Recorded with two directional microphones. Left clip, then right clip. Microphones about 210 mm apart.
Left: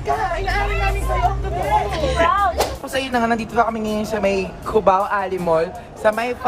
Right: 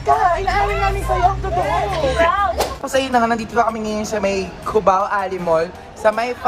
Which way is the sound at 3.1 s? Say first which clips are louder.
Even; 10° left (ahead or behind).